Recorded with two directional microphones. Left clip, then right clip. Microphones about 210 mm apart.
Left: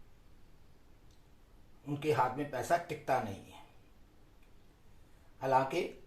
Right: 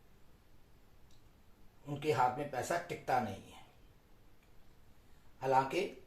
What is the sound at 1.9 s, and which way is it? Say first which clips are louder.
Speech: left 1 dB; 35° left (ahead or behind).